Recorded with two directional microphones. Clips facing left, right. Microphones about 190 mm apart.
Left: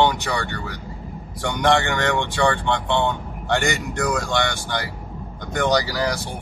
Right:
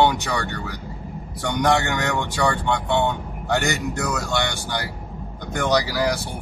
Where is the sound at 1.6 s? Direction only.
10° right (ahead or behind).